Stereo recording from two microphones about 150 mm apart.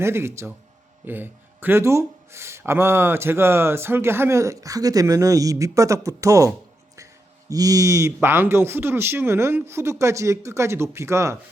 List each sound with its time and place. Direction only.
0.0 s speech: 15° right (ahead or behind)